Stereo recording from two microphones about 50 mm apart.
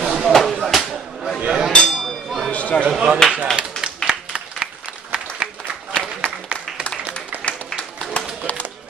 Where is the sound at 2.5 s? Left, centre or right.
Left.